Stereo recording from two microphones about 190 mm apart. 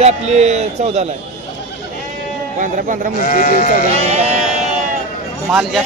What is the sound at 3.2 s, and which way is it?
Speech, 45° left (ahead or behind).